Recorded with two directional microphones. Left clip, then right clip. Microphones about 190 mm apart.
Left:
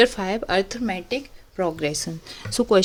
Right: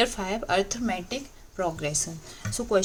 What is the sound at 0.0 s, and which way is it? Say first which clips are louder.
A woman's voice: left 7 dB; 35° left (ahead or behind).